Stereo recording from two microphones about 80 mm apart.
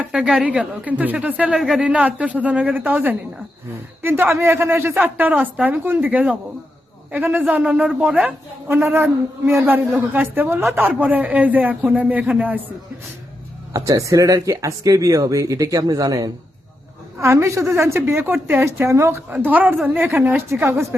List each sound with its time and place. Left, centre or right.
0.1 s a woman's voice: centre
1.5 s speech: centre
1.9 s a woman's voice: centre
7.6 s a woman's voice: centre
13.7 s speech: right
17.2 s a woman's voice: right
19.4 s a woman's voice: right